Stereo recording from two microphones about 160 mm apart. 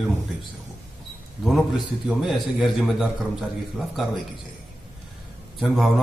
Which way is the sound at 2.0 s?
Centre (ahead or behind).